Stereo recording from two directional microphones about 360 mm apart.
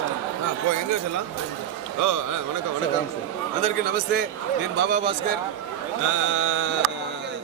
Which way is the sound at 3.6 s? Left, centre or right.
Right.